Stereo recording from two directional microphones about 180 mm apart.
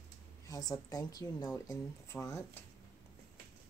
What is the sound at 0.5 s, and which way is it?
A woman's voice, 20° left (ahead or behind).